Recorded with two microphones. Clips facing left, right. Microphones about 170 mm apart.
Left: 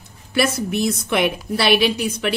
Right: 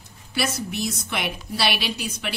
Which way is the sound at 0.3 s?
55° left (ahead or behind).